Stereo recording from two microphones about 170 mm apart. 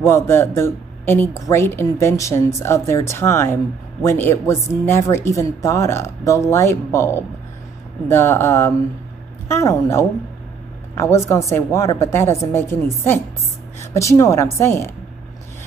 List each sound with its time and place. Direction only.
0.0 s speech: 15° left (ahead or behind)